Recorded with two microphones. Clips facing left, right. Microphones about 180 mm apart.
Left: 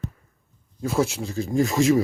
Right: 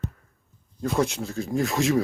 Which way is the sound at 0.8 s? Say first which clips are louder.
Left 1 dB; 5° left (ahead or behind).